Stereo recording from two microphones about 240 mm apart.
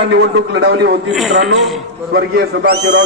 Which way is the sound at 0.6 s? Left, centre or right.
Right.